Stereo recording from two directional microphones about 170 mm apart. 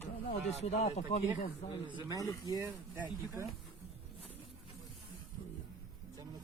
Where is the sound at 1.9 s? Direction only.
20° right (ahead or behind).